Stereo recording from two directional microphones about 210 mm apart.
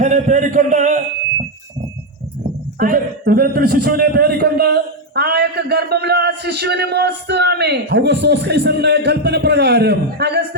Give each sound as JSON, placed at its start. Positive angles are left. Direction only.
{"t": 0.0, "sound": "a man's voice", "side_deg": -35}
{"t": 2.7, "sound": "a man's voice", "side_deg": -45}